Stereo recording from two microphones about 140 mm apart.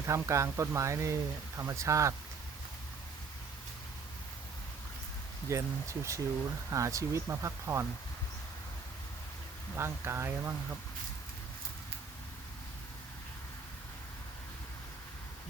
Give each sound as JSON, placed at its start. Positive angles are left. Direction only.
{"t": 0.1, "sound": "speech", "side_deg": -20}
{"t": 5.5, "sound": "speech", "side_deg": -20}
{"t": 9.7, "sound": "speech", "side_deg": -20}